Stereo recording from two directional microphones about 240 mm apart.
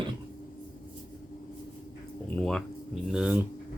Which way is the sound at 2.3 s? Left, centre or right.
Centre.